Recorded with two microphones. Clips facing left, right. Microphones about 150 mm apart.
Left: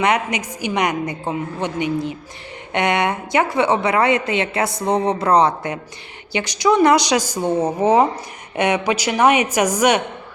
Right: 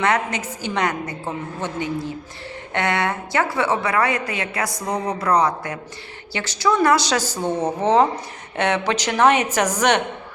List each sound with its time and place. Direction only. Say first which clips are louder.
0.0 s a woman's voice: left 2 dB; 15° left (ahead or behind)